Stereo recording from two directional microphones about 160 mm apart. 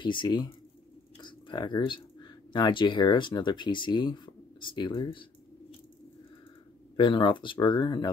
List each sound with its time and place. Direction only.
0.0 s speech: 30° left (ahead or behind)
7.0 s speech: 30° left (ahead or behind)